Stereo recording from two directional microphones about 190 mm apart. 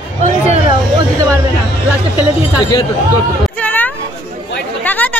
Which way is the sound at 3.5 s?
10° left (ahead or behind).